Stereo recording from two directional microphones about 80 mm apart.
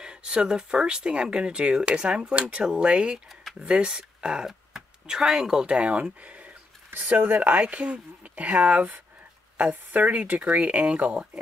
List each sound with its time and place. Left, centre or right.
0.0 s speech: centre
3.3 s a sound: centre
3.6 s speech: centre